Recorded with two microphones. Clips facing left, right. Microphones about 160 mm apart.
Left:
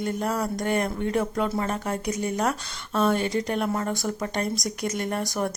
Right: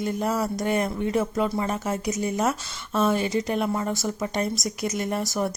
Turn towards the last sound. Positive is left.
turn(degrees=-5)  # may be behind; listen again after turning